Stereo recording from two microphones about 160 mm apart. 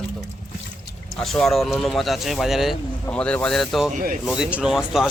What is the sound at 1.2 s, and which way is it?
Speech, centre (ahead or behind).